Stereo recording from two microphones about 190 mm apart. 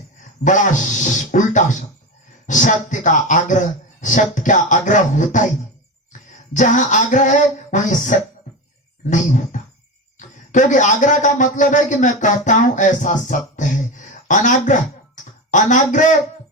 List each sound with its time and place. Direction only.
0.4 s speech: 40° left (ahead or behind)
6.5 s a man's voice: 40° left (ahead or behind)